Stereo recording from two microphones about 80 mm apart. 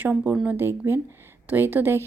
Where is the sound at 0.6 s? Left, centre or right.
Right.